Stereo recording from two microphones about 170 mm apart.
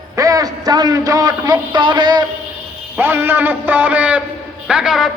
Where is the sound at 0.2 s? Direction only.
20° right (ahead or behind).